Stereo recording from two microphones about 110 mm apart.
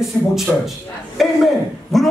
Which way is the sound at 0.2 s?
25° left (ahead or behind).